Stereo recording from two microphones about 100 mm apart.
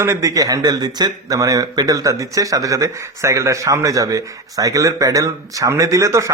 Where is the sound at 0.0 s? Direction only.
30° right (ahead or behind).